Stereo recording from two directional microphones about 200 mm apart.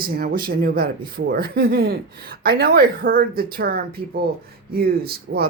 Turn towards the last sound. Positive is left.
turn(degrees=-50)  # may be behind; listen again after turning